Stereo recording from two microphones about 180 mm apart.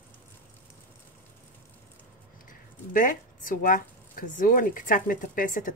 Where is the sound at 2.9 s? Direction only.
50° left (ahead or behind).